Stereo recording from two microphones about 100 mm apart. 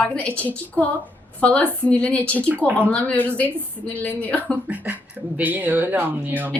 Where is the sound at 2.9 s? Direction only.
15° left (ahead or behind).